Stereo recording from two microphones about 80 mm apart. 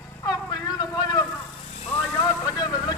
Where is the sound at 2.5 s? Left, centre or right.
Left.